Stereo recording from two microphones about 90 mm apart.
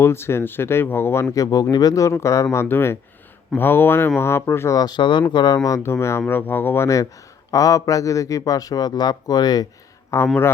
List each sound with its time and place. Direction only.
0.0 s speech: 25° left (ahead or behind)
4.8 s speech: 55° left (ahead or behind)
5.6 s speech: 35° left (ahead or behind)
6.8 s speech: 35° left (ahead or behind)
10.1 s speech: 30° left (ahead or behind)